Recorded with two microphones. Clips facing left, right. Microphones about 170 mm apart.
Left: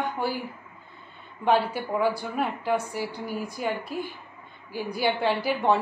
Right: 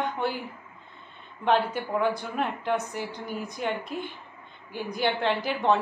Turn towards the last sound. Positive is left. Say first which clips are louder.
# left 1 dB
turn(degrees=10)  # may be behind; listen again after turning